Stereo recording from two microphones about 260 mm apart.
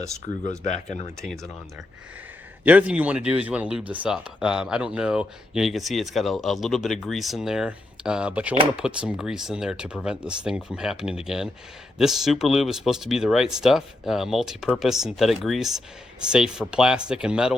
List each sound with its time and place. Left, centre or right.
0.2 s speech: left
1.2 s speech: centre
2.6 s speech: centre